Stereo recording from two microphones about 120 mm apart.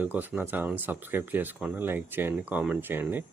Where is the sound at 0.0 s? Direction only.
15° right (ahead or behind).